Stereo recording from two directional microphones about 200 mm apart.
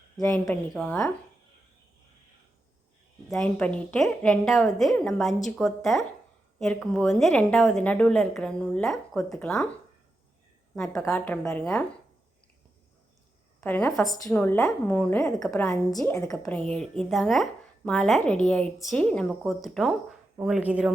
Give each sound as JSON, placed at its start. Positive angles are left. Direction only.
{"t": 0.2, "sound": "speech", "side_deg": 15}
{"t": 3.2, "sound": "a woman's voice", "side_deg": 5}
{"t": 11.0, "sound": "speech", "side_deg": 10}
{"t": 13.6, "sound": "a woman's voice", "side_deg": 10}
{"t": 15.4, "sound": "a woman's voice", "side_deg": 15}